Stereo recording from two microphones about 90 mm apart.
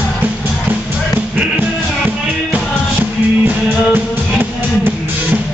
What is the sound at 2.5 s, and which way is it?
Music, 20° right (ahead or behind).